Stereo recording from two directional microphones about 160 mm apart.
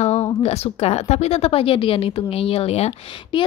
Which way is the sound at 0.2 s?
40° left (ahead or behind).